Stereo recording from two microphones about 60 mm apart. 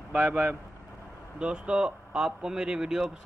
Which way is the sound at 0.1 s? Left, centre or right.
Centre.